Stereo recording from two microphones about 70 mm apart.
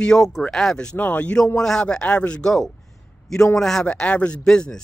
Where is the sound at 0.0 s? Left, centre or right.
Centre.